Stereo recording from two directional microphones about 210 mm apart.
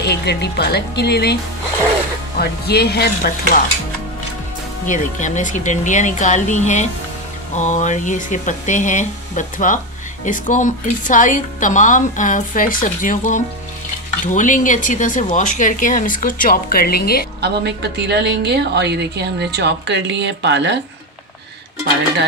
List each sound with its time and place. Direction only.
0.0 s speech: 50° left (ahead or behind)
4.8 s a woman's voice: 35° left (ahead or behind)
17.4 s a woman's voice: 55° right (ahead or behind)